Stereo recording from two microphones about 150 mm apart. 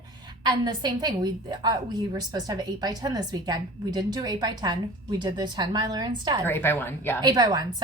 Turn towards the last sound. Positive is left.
turn(degrees=-25)  # may be behind; listen again after turning